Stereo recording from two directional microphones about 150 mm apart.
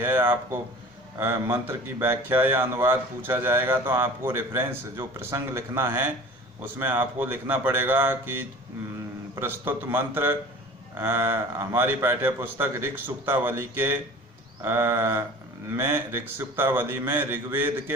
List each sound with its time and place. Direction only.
0.0 s speech: 15° right (ahead or behind)